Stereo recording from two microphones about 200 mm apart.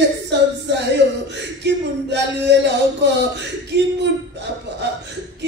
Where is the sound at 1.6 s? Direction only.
60° right (ahead or behind).